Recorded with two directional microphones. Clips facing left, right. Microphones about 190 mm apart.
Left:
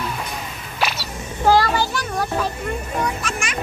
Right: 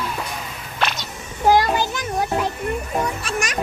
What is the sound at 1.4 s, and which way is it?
Child singing, 20° right (ahead or behind).